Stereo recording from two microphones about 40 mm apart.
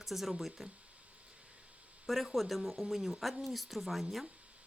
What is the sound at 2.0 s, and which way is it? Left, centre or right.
A woman's voice, centre.